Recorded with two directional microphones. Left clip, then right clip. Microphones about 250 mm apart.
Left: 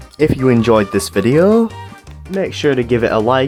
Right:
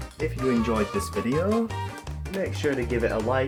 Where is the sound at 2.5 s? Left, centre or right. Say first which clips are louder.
Left 13 dB; left.